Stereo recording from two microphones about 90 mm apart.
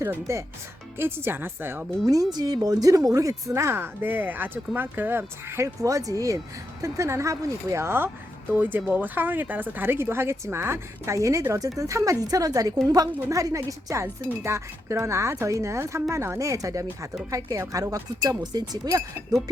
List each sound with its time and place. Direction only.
0.0 s speech: 30° right (ahead or behind)
2.3 s a woman's voice: 45° right (ahead or behind)